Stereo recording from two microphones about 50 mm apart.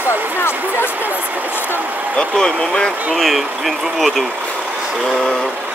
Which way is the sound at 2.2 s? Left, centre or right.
Centre.